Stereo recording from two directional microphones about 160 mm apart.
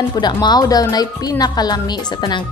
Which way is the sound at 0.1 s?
25° left (ahead or behind).